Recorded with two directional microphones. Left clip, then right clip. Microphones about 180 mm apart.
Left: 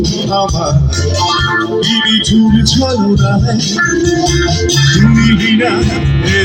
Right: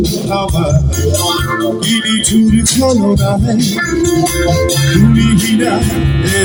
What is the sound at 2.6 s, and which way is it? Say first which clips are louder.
Music: right 1 dB; 35° right (ahead or behind).